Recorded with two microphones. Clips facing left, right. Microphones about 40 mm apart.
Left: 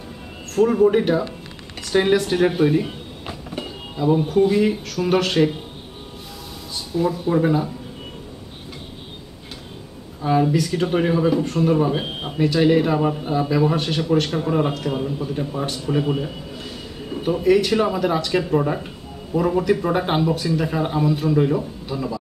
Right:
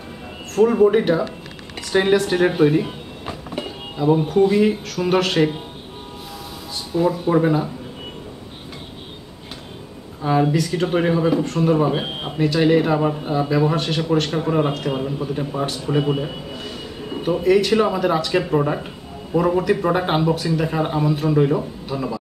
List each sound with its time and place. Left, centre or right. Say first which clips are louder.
0.5 s a man's voice: right 1 dB; centre
6.7 s a sound: right 2 dB; centre
7.4 s speech: right 1 dB; centre
10.5 s speech: even; centre
11.7 s speech: right 1 dB; centre
14.4 s speech: right 1 dB; centre
17.2 s speech: right 1 dB; centre